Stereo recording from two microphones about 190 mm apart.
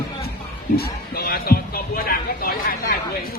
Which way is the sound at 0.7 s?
55° left (ahead or behind).